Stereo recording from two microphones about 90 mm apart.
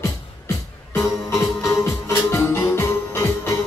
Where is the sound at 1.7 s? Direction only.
35° left (ahead or behind).